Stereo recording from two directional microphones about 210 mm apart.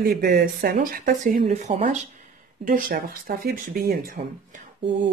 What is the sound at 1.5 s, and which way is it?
Speech, 30° right (ahead or behind).